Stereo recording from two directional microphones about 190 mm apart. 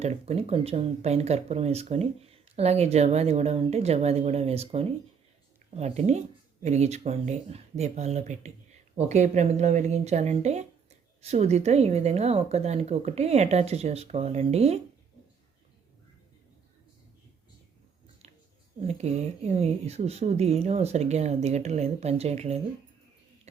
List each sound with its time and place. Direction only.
0.0 s speech: 35° right (ahead or behind)
18.8 s speech: 35° right (ahead or behind)